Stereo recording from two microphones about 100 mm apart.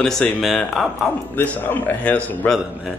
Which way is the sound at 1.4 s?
20° left (ahead or behind).